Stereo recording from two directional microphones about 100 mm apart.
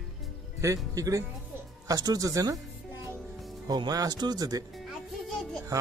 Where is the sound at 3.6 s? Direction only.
40° right (ahead or behind).